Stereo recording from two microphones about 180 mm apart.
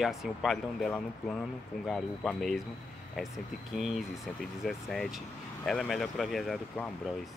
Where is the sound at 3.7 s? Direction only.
Centre (ahead or behind).